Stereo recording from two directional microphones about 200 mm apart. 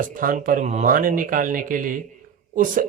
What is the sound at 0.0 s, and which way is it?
Speech, 40° right (ahead or behind).